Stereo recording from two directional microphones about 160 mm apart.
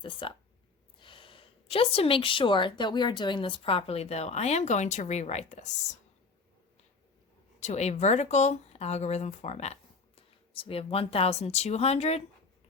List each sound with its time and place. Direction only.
0.0 s a woman's voice: 30° left (ahead or behind)
7.6 s speech: 45° left (ahead or behind)